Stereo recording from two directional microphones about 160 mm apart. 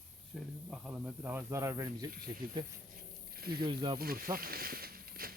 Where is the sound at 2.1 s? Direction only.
65° right (ahead or behind).